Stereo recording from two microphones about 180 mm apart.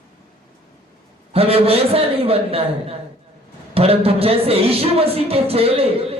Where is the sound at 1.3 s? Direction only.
35° right (ahead or behind).